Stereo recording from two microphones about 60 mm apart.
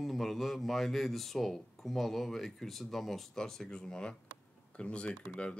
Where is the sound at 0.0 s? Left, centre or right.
Centre.